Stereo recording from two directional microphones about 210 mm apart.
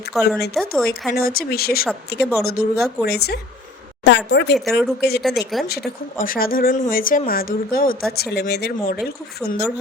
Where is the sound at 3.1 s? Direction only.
50° left (ahead or behind).